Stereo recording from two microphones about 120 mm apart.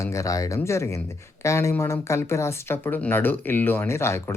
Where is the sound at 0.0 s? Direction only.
25° left (ahead or behind).